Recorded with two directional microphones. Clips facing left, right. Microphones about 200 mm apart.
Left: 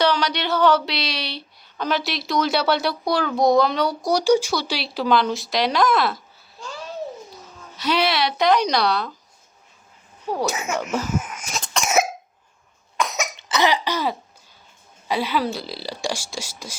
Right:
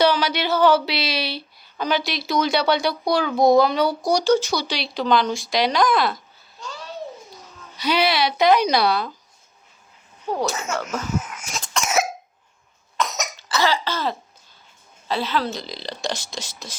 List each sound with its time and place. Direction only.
0.0 s speech: 5° right (ahead or behind)
4.2 s speech: 10° left (ahead or behind)
10.2 s speech: 10° left (ahead or behind)
11.2 s throat clearing: 15° left (ahead or behind)
13.0 s cough: 10° left (ahead or behind)
13.3 s speech: 20° left (ahead or behind)